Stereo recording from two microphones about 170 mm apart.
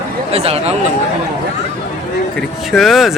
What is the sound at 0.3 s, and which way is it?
Speech, 35° right (ahead or behind).